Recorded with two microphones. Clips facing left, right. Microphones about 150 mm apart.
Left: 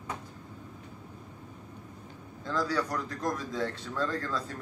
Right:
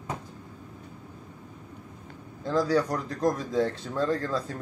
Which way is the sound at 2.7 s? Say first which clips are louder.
Right 6 dB; 25° right (ahead or behind).